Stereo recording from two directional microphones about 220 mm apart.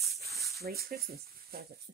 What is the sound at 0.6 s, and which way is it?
Speech, 45° right (ahead or behind).